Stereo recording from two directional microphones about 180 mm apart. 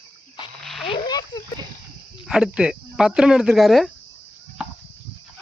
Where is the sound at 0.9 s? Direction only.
20° left (ahead or behind).